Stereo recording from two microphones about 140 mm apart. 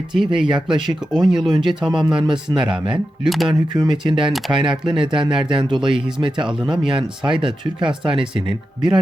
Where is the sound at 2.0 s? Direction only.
30° right (ahead or behind).